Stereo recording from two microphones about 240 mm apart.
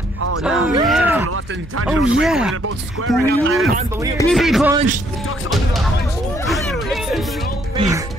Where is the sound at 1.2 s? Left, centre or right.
Right.